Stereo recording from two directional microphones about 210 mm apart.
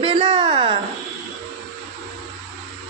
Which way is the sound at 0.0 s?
25° right (ahead or behind).